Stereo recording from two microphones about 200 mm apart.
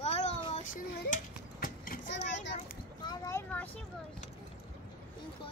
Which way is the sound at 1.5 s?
45° left (ahead or behind).